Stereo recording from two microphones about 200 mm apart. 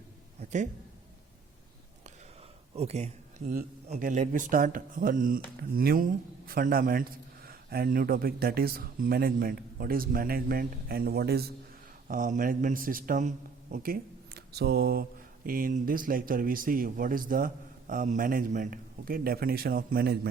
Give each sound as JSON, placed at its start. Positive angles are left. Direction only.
{"t": 0.3, "sound": "a sound", "side_deg": -35}
{"t": 2.7, "sound": "speech", "side_deg": -30}
{"t": 12.0, "sound": "a man's voice", "side_deg": -40}